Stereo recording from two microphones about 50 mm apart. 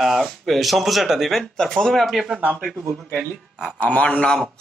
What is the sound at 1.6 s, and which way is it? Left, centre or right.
Speech, centre.